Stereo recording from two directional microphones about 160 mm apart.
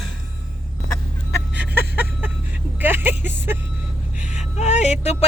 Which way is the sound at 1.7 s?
10° right (ahead or behind).